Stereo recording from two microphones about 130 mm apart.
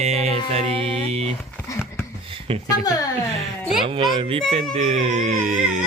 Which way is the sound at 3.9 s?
45° right (ahead or behind).